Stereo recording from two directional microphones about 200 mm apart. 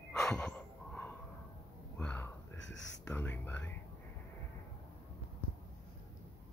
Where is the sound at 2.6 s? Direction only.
65° left (ahead or behind).